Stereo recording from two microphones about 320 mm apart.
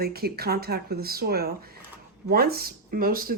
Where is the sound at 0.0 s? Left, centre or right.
Right.